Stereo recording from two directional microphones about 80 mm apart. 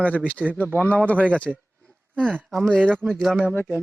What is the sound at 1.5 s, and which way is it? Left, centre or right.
Speech, centre.